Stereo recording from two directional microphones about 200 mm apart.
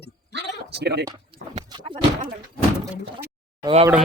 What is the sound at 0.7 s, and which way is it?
Speech, 55° right (ahead or behind).